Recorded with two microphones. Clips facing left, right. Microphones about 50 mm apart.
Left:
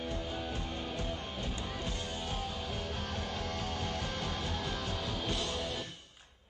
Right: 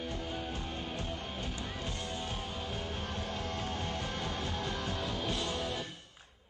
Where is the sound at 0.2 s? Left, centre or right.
Right.